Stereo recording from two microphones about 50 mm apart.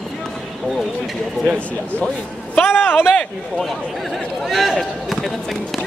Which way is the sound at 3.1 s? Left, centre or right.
Centre.